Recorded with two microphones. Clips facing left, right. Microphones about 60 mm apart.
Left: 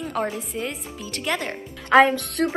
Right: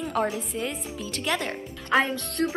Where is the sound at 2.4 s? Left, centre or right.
Left.